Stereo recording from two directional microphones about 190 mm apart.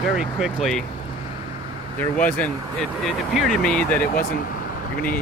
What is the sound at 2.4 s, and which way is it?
Speech, centre (ahead or behind).